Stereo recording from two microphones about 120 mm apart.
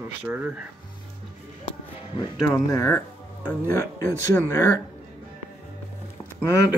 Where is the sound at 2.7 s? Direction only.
25° left (ahead or behind).